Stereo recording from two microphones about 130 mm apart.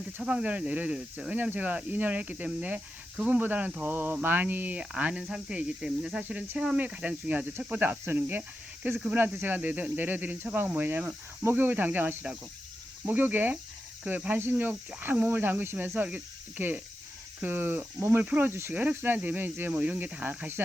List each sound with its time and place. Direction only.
0.2 s speech: 5° right (ahead or behind)